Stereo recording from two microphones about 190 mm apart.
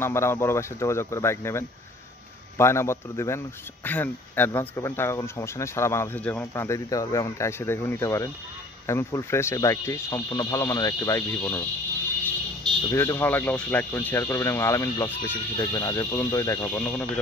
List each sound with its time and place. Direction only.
0.0 s speech: 15° left (ahead or behind)
12.9 s speech: 15° left (ahead or behind)